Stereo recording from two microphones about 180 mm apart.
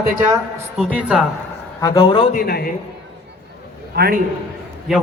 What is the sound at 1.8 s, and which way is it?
Speech, 20° left (ahead or behind).